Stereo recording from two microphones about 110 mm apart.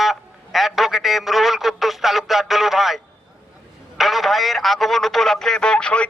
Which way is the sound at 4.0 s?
Centre (ahead or behind).